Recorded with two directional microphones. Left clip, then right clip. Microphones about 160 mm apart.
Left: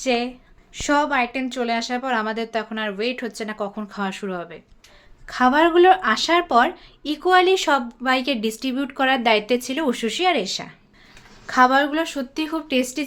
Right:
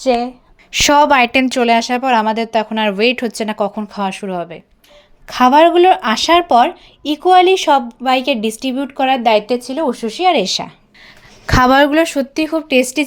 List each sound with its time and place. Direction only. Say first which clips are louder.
0.0 s a woman's voice: right 7 dB; 15° right (ahead or behind)
0.7 s speech: right 10 dB; 65° right (ahead or behind); by 3.7 s 45° right (ahead or behind)
3.8 s speech: right 7 dB; 30° right (ahead or behind); by 9.6 s 15° right (ahead or behind)
9.6 s speech: right 5 dB; 5° right (ahead or behind)
10.3 s speech: right 9 dB; 35° right (ahead or behind)
11.4 s speech: right 6 dB; 60° right (ahead or behind)